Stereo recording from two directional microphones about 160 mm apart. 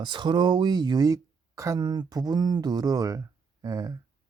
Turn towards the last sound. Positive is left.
turn(degrees=-20)  # may be behind; listen again after turning